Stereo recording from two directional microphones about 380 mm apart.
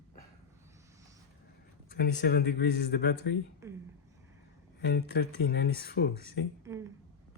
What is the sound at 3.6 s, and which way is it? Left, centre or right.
Speech, centre.